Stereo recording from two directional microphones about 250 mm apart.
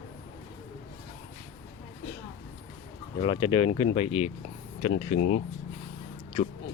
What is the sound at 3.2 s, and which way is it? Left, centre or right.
Speech, centre.